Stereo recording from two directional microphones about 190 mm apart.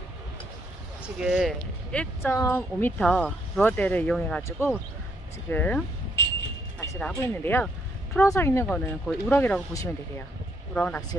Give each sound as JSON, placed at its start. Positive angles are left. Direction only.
{"t": 1.0, "sound": "speech", "side_deg": -5}